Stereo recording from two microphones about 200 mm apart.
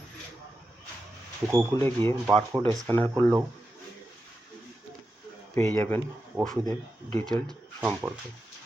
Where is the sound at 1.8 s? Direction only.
10° left (ahead or behind).